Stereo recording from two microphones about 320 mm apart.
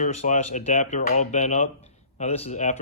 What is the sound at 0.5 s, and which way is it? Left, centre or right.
Speech, left.